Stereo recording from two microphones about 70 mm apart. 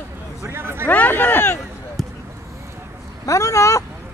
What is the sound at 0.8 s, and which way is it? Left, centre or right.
Speech, left.